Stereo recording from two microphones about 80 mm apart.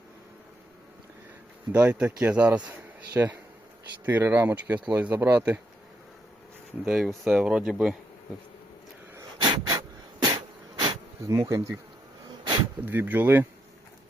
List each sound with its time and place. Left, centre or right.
1.7 s speech: centre
6.8 s speech: centre
9.4 s a sound: right
11.3 s bee: right
12.8 s speech: right